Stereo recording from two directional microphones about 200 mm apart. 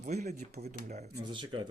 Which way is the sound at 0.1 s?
35° right (ahead or behind).